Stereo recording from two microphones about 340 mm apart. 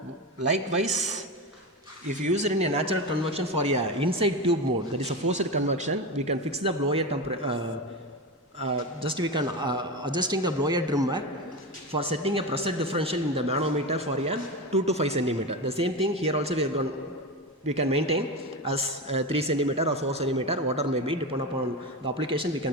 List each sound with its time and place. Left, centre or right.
2.0 s speech: centre
9.0 s speech: centre